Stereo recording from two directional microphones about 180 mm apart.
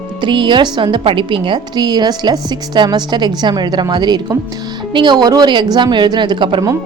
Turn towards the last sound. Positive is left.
turn(degrees=-25)  # may be behind; listen again after turning